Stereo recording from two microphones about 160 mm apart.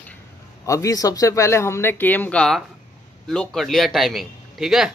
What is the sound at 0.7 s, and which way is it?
A man's voice, 20° left (ahead or behind).